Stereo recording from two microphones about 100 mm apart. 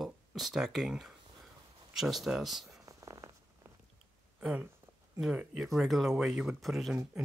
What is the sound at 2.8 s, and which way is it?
Purr, 35° right (ahead or behind).